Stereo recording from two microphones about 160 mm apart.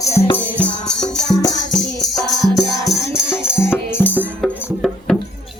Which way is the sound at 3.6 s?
15° left (ahead or behind).